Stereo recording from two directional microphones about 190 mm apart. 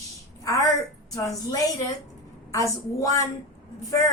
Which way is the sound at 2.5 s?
15° left (ahead or behind).